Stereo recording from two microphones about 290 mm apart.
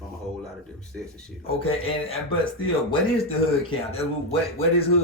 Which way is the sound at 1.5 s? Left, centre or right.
Centre.